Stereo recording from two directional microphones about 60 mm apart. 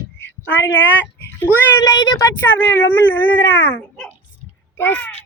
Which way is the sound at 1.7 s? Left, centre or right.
Left.